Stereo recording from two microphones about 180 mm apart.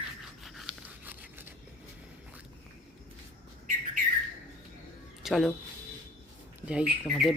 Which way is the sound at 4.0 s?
50° right (ahead or behind).